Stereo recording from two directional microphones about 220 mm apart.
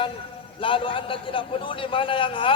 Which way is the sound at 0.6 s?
25° left (ahead or behind).